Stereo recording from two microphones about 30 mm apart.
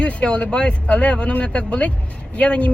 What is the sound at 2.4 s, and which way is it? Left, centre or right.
Speech, left.